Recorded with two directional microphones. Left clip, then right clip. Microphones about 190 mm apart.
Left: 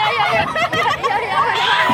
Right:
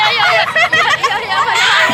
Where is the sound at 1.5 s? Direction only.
30° right (ahead or behind).